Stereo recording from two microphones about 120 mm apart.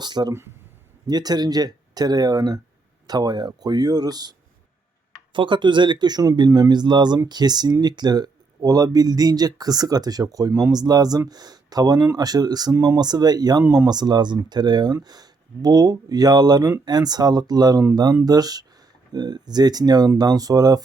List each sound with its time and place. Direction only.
0.0 s speech: 35° right (ahead or behind)